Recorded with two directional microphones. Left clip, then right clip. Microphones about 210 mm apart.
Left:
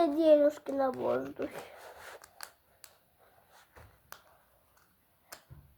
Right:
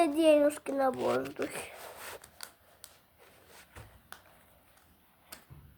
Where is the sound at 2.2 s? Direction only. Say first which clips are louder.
Even; 5° left (ahead or behind).